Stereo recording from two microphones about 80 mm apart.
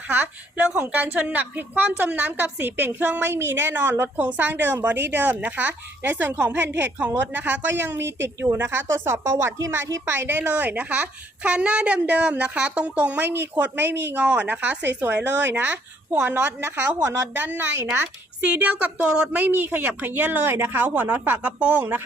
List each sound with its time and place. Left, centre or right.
0.1 s a woman's voice: right
18.4 s a woman's voice: centre